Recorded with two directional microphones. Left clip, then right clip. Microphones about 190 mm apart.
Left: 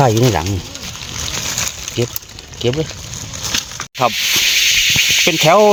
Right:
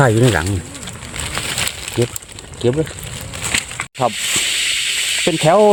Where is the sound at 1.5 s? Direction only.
45° right (ahead or behind).